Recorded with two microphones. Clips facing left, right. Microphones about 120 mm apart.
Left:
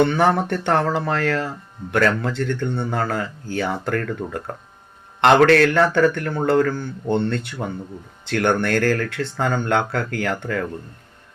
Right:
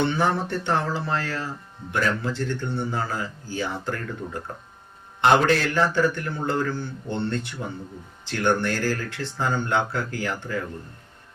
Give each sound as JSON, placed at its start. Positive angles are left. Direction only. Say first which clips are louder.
{"t": 0.0, "sound": "speech", "louder": "left 6 dB", "side_deg": 65}
{"t": 5.2, "sound": "speech", "louder": "left 6 dB", "side_deg": 75}
{"t": 7.6, "sound": "speech", "louder": "left 5 dB", "side_deg": 65}